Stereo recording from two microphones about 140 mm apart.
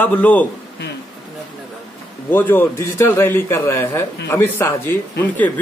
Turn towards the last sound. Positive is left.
turn(degrees=15)  # may be behind; listen again after turning